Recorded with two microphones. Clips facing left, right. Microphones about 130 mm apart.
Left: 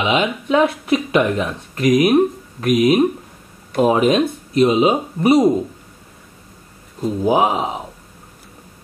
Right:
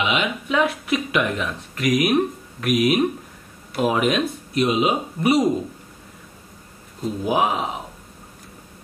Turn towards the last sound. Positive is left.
turn(degrees=30)  # may be behind; listen again after turning